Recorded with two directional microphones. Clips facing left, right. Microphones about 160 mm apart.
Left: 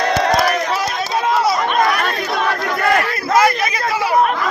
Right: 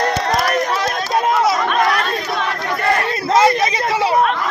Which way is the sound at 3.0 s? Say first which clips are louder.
Right 1 dB; 25° right (ahead or behind).